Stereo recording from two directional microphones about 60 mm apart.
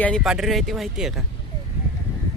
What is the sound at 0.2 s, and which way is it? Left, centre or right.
Speech, centre.